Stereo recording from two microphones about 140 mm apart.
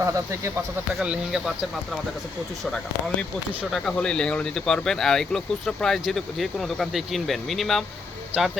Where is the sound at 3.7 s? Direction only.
5° left (ahead or behind).